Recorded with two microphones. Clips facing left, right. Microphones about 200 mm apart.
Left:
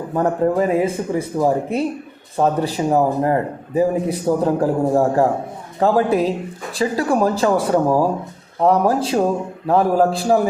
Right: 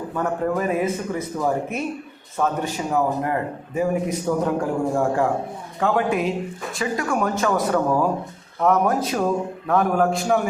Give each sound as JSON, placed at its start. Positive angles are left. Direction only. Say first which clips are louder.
{"t": 0.1, "sound": "a man's voice", "louder": "left 6 dB", "side_deg": 30}